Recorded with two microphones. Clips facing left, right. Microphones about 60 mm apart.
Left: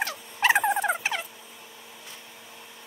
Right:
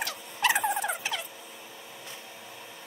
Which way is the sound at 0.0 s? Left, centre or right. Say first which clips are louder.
Left 3 dB; left.